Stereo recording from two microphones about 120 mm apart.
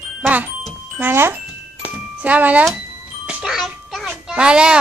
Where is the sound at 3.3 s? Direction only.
5° right (ahead or behind).